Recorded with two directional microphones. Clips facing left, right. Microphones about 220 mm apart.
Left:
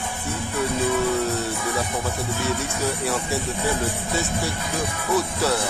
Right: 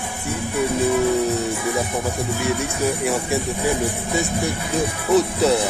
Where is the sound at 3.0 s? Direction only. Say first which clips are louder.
Right 4 dB; 15° right (ahead or behind).